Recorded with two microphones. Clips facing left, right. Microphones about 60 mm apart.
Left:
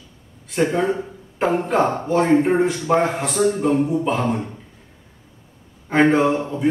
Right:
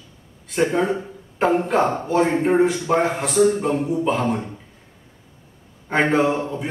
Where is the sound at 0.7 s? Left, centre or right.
Centre.